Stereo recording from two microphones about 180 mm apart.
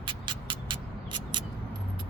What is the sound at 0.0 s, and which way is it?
Music, 25° right (ahead or behind).